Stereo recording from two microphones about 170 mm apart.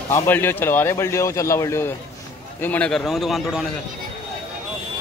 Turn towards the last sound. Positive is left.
turn(degrees=0)  # may be behind; listen again after turning